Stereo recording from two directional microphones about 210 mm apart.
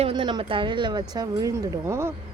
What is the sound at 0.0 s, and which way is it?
Speech, 25° right (ahead or behind).